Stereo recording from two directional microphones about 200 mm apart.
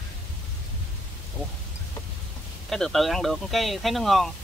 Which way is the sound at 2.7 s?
Centre (ahead or behind).